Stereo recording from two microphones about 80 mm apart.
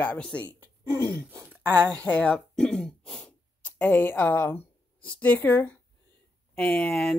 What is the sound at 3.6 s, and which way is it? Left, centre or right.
A woman's voice, left.